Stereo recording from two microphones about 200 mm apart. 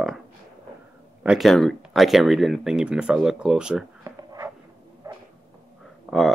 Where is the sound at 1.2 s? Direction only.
5° right (ahead or behind).